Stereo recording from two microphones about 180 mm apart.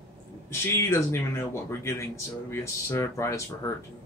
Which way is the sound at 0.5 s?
15° left (ahead or behind).